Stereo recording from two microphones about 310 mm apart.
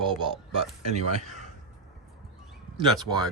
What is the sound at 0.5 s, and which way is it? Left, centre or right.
Speech, right.